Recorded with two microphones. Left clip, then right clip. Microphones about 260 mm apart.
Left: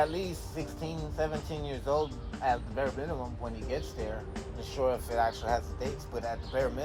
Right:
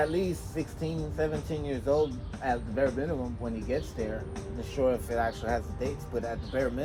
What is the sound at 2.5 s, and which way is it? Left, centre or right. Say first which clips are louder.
Speech: right 2 dB; left.